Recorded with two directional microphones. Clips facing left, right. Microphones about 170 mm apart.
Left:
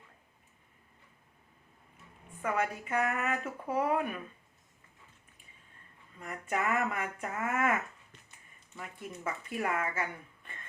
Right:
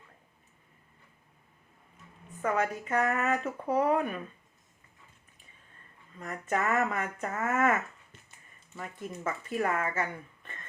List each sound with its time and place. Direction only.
2.4 s speech: 10° left (ahead or behind)
3.4 s speech: 35° right (ahead or behind)
6.1 s speech: 10° left (ahead or behind)
8.8 s speech: 40° right (ahead or behind)
9.5 s speech: 10° left (ahead or behind)